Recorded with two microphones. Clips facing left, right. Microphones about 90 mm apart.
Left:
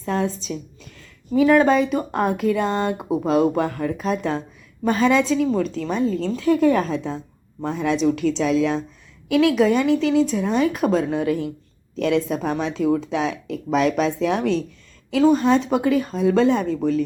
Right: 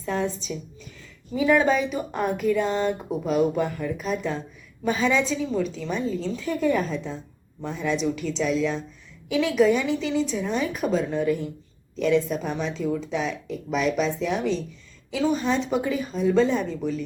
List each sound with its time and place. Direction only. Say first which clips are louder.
0.0 s a woman's voice: left 3 dB; 50° left (ahead or behind)
3.1 s speech: left 7 dB; 90° left
4.0 s a woman's voice: left 5 dB; 60° left (ahead or behind); by 11.5 s 90° left
11.9 s a woman's voice: left 1 dB; 70° left (ahead or behind)
13.9 s a woman's voice: left 4 dB; 60° left (ahead or behind)
15.1 s a woman's voice: left 7 dB; 45° left (ahead or behind)